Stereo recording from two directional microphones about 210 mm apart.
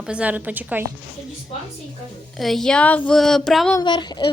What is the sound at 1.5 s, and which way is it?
Speech, 30° left (ahead or behind).